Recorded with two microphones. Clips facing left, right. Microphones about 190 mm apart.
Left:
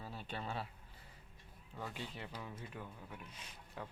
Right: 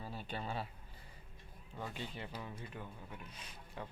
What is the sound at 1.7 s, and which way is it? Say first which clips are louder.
Speech: right 1 dB; centre (ahead or behind).